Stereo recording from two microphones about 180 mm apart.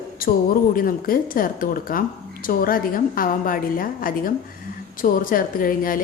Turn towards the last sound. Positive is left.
turn(degrees=50)  # may be behind; listen again after turning